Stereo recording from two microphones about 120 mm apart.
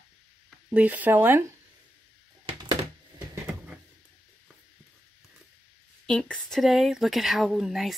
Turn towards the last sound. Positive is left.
turn(degrees=0)  # may be behind; listen again after turning